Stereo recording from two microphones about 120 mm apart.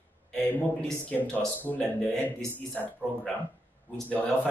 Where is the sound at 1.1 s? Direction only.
15° left (ahead or behind).